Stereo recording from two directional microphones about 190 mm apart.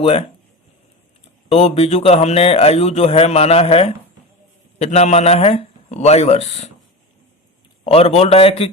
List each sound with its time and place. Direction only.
0.0 s speech: 30° left (ahead or behind)
1.5 s speech: 30° left (ahead or behind)
7.9 s speech: 30° left (ahead or behind)